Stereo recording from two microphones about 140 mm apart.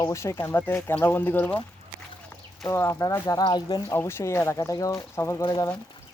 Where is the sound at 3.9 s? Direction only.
20° left (ahead or behind).